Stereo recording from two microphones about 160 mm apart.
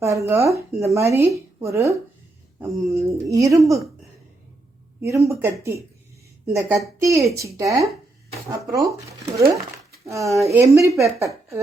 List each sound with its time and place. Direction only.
0.0 s speech: 20° right (ahead or behind)
4.9 s speech: 20° right (ahead or behind)